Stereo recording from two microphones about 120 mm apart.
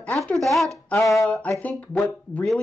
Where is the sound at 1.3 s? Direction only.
10° left (ahead or behind).